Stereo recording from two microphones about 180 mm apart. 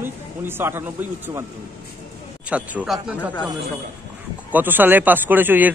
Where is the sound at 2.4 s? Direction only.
5° right (ahead or behind).